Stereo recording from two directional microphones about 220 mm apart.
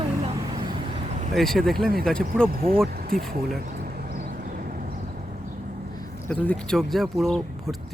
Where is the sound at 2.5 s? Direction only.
40° right (ahead or behind).